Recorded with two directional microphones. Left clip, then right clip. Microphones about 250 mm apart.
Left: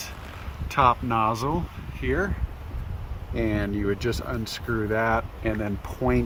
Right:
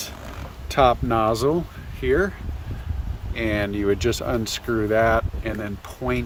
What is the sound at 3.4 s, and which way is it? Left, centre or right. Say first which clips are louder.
Speech: right 4 dB; centre.